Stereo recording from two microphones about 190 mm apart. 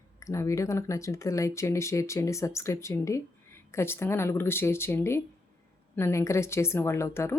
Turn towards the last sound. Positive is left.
turn(degrees=15)  # may be behind; listen again after turning